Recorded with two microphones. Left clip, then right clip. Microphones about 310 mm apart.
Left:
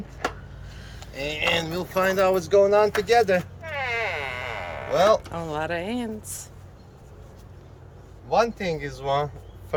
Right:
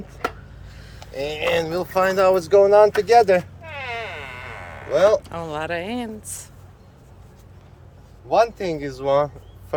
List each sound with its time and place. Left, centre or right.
0.9 s speech: centre
3.6 s a sound: centre
4.9 s speech: centre
8.3 s speech: centre